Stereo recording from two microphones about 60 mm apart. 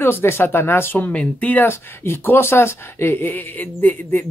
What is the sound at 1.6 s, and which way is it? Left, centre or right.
Speech, left.